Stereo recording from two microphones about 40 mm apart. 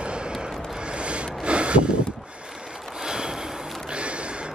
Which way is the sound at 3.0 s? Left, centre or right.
Centre.